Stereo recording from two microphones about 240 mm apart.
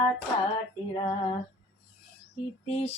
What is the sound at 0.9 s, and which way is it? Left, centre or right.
Female singing, left.